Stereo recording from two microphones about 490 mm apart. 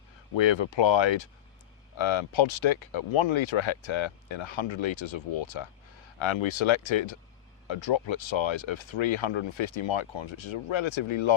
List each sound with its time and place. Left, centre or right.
0.3 s speech: left